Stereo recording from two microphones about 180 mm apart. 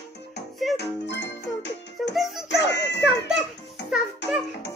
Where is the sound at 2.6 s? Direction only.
75° left (ahead or behind).